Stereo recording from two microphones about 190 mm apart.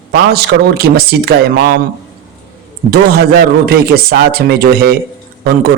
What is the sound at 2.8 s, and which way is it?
A man's voice, 55° right (ahead or behind).